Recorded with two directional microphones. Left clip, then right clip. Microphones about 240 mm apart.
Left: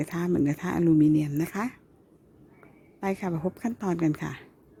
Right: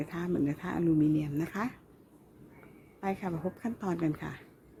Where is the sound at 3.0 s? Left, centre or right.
Left.